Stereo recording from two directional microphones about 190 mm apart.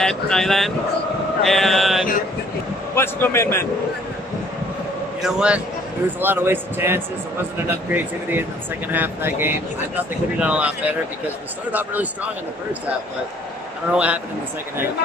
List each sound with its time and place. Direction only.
0.0 s speech: 5° left (ahead or behind)
2.9 s a man's voice: 10° left (ahead or behind)
5.2 s speech: 5° right (ahead or behind)
13.9 s speech: 5° right (ahead or behind)